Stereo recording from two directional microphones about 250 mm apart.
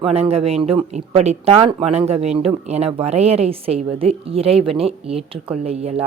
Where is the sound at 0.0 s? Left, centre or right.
Right.